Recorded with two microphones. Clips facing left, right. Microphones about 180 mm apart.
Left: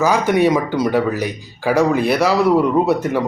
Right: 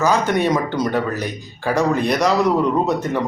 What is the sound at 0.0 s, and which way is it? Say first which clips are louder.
Speech: left 3 dB; 10° left (ahead or behind).